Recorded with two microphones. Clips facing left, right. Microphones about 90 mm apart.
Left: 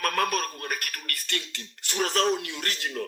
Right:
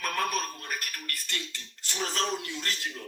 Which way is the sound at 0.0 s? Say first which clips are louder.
Left 4 dB; 60° left (ahead or behind).